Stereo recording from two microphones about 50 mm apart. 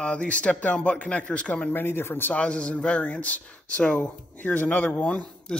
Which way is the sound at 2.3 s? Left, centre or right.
Centre.